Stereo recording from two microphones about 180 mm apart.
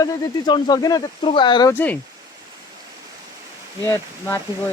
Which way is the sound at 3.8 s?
20° left (ahead or behind).